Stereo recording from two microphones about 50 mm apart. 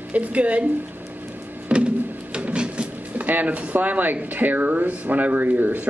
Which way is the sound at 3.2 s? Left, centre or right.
Right.